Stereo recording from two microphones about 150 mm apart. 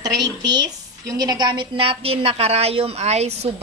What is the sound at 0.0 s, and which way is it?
A woman's voice, 25° right (ahead or behind).